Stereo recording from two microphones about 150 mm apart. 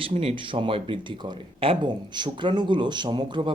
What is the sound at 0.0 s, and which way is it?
Speech, 40° right (ahead or behind).